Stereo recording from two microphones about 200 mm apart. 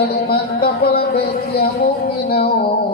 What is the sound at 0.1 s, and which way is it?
A man's voice, 50° left (ahead or behind).